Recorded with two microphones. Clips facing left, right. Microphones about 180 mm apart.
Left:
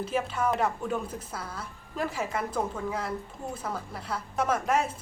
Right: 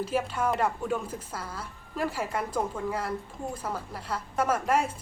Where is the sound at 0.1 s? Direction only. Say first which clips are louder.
Left 2 dB; 5° right (ahead or behind).